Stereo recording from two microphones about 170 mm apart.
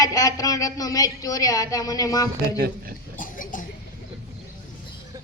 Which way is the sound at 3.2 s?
55° left (ahead or behind).